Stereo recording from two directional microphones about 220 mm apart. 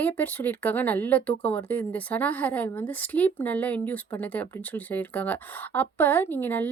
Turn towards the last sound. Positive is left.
turn(degrees=10)  # may be behind; listen again after turning